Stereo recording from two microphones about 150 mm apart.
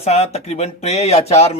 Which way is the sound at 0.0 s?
45° left (ahead or behind).